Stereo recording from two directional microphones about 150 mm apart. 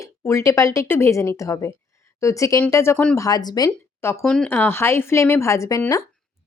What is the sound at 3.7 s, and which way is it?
A woman's voice, 15° left (ahead or behind).